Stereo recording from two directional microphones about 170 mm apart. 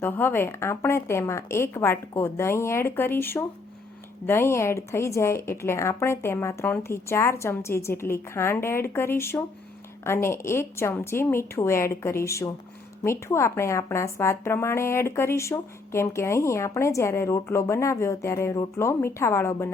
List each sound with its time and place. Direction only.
0.0 s a woman's voice: 10° left (ahead or behind)